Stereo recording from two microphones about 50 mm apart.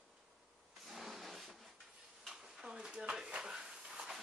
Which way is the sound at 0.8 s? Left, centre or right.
Centre.